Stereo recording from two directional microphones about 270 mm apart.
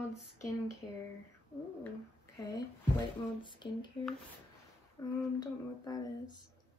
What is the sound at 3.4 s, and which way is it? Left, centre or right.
Speech, centre.